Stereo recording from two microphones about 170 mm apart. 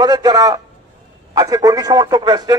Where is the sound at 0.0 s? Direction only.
25° right (ahead or behind).